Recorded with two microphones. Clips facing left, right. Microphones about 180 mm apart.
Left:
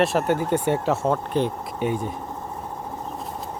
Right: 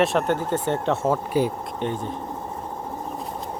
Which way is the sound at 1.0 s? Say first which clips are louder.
Right 3 dB; 5° right (ahead or behind).